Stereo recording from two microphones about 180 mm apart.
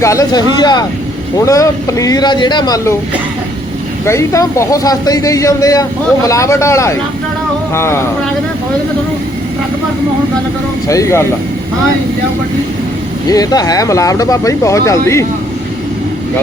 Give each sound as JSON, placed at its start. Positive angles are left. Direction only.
{"t": 0.0, "sound": "speech", "side_deg": 15}
{"t": 4.0, "sound": "speech", "side_deg": 15}
{"t": 10.8, "sound": "speech", "side_deg": 15}
{"t": 13.2, "sound": "speech", "side_deg": 20}